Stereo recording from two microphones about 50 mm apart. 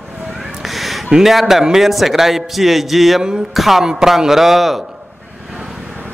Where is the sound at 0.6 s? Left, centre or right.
Centre.